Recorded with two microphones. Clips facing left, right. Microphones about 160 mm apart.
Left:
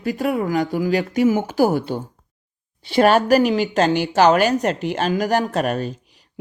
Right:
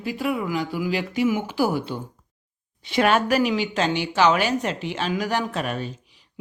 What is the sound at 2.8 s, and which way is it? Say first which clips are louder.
Speech: left 5 dB; 35° left (ahead or behind).